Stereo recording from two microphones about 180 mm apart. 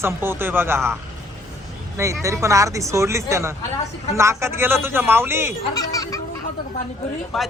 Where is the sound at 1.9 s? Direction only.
15° right (ahead or behind).